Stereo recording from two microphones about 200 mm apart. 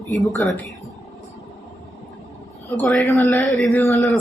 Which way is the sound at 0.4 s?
10° left (ahead or behind).